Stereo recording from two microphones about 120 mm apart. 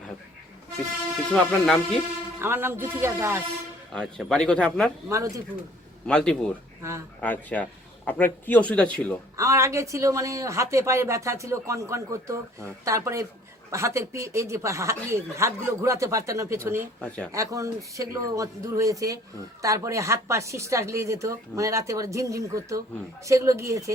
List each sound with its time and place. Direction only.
1.3 s speech: 5° left (ahead or behind)
2.4 s speech: 20° right (ahead or behind)
3.9 s a man's voice: 5° left (ahead or behind)
5.0 s speech: 25° right (ahead or behind)
6.1 s a man's voice: 5° left (ahead or behind)
6.8 s speech: 20° right (ahead or behind)
7.2 s a man's voice: 10° left (ahead or behind)
9.4 s speech: 25° right (ahead or behind)
17.0 s a man's voice: 10° left (ahead or behind)
17.3 s speech: 25° right (ahead or behind)